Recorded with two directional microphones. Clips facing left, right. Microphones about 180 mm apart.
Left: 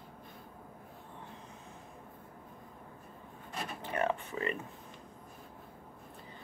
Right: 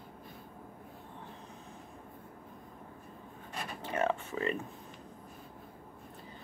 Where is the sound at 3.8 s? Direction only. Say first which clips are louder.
Right 1 dB; 15° left (ahead or behind).